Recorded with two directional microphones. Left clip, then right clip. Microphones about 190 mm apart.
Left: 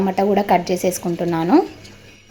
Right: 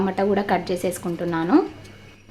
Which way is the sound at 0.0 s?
15° left (ahead or behind).